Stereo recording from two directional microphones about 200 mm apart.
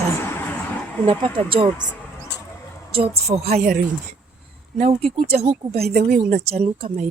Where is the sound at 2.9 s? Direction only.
30° right (ahead or behind).